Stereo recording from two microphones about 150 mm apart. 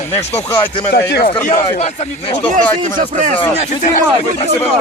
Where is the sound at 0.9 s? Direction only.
90° left.